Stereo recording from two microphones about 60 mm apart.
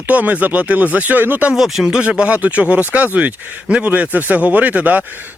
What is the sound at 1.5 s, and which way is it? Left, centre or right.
Speech, centre.